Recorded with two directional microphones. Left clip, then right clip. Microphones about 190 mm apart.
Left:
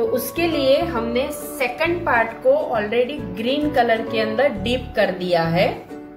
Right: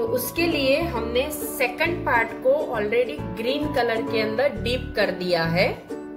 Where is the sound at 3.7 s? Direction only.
25° right (ahead or behind).